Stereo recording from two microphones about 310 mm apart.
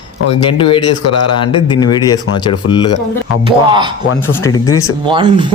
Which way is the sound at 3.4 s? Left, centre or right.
Centre.